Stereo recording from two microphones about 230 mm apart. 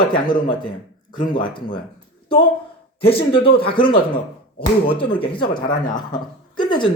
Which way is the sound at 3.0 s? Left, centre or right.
Left.